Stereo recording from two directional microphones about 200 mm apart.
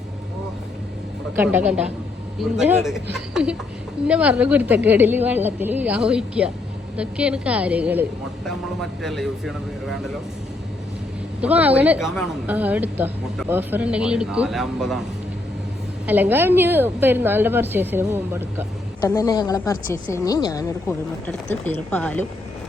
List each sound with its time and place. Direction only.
1.4 s a woman's voice: 10° right (ahead or behind)
11.3 s a woman's voice: 5° right (ahead or behind)
16.0 s a woman's voice: 10° right (ahead or behind)
19.0 s speech: 15° left (ahead or behind)